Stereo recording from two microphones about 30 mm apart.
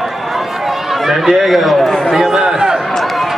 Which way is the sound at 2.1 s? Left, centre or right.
Centre.